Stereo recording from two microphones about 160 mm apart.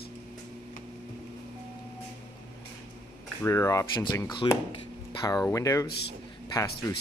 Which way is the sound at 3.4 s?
20° left (ahead or behind).